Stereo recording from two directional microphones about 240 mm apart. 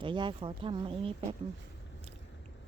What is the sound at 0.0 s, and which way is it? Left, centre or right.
Speech, centre.